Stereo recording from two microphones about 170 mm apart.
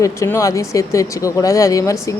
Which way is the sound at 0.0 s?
20° left (ahead or behind).